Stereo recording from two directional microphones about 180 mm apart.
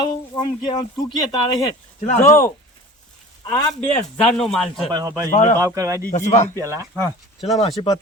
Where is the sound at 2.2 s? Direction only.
15° left (ahead or behind).